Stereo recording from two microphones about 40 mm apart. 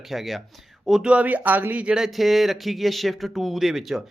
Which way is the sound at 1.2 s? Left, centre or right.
Right.